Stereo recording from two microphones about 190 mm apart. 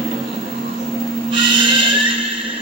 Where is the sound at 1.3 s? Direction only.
25° right (ahead or behind).